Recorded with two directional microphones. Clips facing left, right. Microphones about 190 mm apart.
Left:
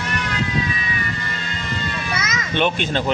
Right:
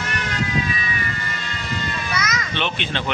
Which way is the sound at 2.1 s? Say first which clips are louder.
Right 2 dB; 25° left (ahead or behind).